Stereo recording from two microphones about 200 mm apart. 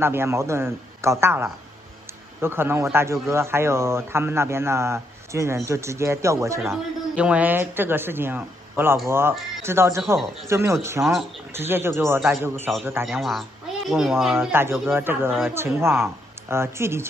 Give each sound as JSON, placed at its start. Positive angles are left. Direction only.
{"t": 0.0, "sound": "a man's voice", "side_deg": -10}
{"t": 13.0, "sound": "a man's voice", "side_deg": 0}